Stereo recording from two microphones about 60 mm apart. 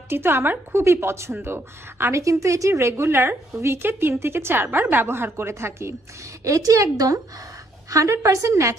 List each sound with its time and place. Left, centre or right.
0.1 s a woman's voice: right
2.2 s a woman's voice: right
2.9 s a woman's voice: right
6.4 s a woman's voice: right
7.9 s a woman's voice: right